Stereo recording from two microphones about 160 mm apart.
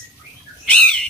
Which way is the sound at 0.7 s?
5° left (ahead or behind).